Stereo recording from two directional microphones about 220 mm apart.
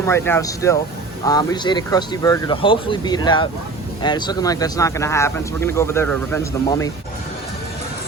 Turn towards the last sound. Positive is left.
turn(degrees=15)  # may be behind; listen again after turning